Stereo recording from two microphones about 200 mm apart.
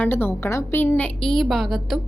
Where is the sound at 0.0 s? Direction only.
10° left (ahead or behind).